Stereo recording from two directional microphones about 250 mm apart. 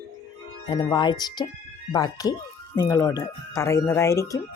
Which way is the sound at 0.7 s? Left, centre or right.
Centre.